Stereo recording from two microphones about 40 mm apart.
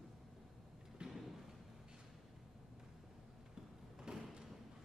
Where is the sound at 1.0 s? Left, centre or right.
Right.